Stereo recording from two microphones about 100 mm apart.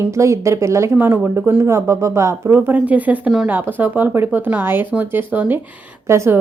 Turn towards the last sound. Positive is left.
turn(degrees=-30)  # may be behind; listen again after turning